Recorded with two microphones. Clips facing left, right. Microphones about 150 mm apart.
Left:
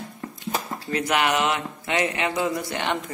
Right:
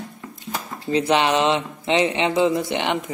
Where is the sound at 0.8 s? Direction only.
25° right (ahead or behind).